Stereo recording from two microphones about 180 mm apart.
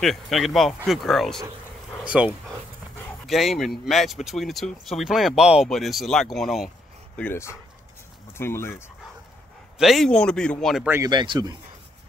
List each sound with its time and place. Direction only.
0.0 s speech: centre (ahead or behind)
7.2 s speech: 10° left (ahead or behind)
9.8 s speech: centre (ahead or behind)
10.9 s speech: 20° right (ahead or behind)